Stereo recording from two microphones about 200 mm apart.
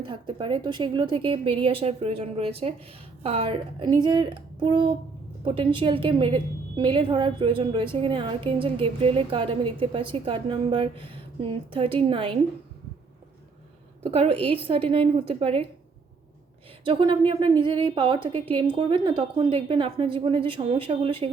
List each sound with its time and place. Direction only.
0.0 s a woman's voice: 25° right (ahead or behind)
14.1 s a woman's voice: 30° right (ahead or behind)
16.8 s a woman's voice: 25° right (ahead or behind)